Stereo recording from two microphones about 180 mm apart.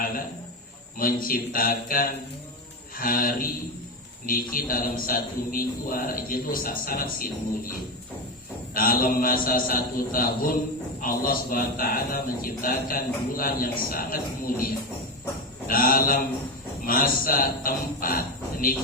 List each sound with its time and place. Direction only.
0.9 s a man's voice: 50° left (ahead or behind)
8.7 s a man's voice: 50° left (ahead or behind)